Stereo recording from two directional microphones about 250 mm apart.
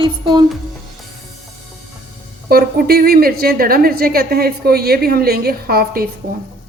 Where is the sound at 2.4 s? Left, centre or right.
Right.